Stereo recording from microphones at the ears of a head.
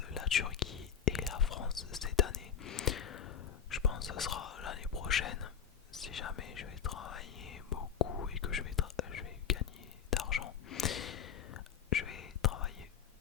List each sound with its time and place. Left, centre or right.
0.0 s whispering: left